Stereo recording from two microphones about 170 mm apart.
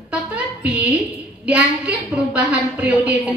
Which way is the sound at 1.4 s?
5° right (ahead or behind).